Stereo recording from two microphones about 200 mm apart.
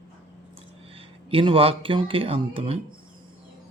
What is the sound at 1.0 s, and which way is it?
Speech, 25° right (ahead or behind).